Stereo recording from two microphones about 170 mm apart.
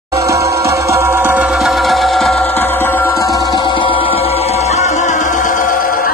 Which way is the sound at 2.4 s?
10° left (ahead or behind).